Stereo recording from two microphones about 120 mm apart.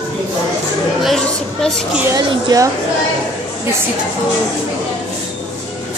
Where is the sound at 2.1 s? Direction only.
30° right (ahead or behind).